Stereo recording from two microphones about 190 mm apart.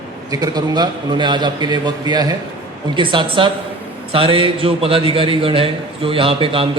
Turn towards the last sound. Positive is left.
turn(degrees=-30)  # may be behind; listen again after turning